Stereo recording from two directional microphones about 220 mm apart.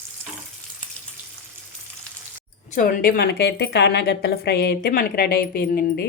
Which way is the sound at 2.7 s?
40° left (ahead or behind).